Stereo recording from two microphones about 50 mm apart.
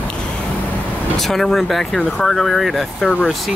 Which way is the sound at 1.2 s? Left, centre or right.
Centre.